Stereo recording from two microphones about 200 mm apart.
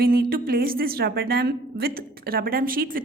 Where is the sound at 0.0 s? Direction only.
45° right (ahead or behind).